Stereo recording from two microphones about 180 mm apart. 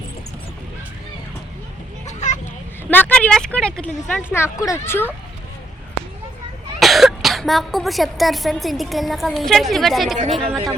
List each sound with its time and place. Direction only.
2.0 s children playing: 40° left (ahead or behind)
2.9 s speech: 5° left (ahead or behind)
6.7 s speech: centre (ahead or behind)